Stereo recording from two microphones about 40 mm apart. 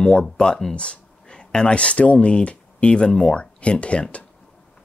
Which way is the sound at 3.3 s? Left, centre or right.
Left.